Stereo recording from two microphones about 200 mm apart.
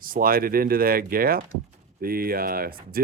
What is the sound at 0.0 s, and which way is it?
Speech, 45° right (ahead or behind).